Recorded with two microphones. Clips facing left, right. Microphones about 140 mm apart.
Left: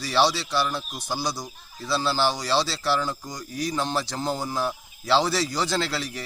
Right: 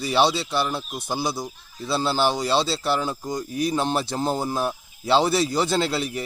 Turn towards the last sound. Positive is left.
turn(degrees=-25)  # may be behind; listen again after turning